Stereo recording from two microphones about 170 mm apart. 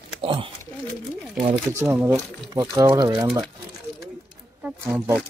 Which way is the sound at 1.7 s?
15° right (ahead or behind).